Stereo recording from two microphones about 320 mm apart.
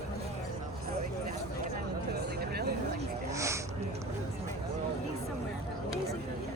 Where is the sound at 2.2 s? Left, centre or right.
Right.